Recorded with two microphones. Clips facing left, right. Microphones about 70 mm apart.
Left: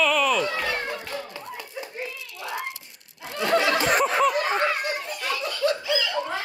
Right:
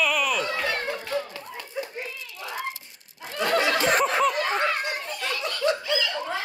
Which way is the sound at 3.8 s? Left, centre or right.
Centre.